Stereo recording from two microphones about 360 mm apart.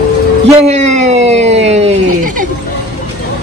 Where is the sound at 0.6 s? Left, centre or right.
Centre.